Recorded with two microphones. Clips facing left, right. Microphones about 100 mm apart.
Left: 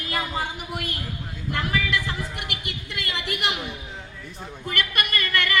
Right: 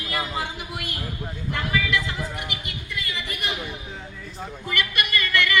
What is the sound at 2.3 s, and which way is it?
A woman's voice, 60° left (ahead or behind).